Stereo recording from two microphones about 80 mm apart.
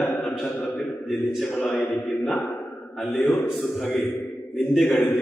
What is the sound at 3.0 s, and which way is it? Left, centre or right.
A man's voice, centre.